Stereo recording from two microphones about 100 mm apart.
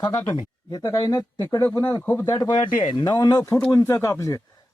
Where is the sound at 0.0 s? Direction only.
40° left (ahead or behind).